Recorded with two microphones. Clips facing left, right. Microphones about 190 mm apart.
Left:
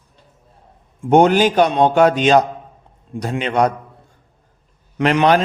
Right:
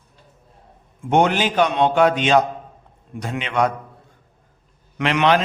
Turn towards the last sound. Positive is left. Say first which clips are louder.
# left 3 dB
turn(degrees=40)  # may be behind; listen again after turning